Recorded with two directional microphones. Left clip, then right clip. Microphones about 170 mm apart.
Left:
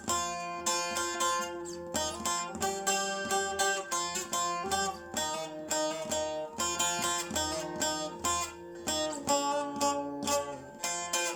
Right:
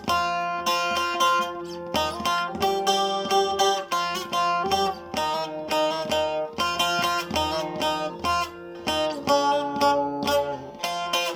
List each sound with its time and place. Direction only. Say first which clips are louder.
0.1 s music: right 10 dB; 20° right (ahead or behind)